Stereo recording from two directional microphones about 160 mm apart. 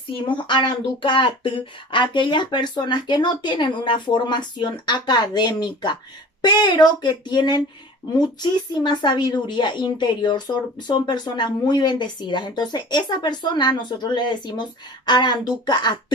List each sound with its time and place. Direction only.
0.2 s a woman's voice: 30° left (ahead or behind)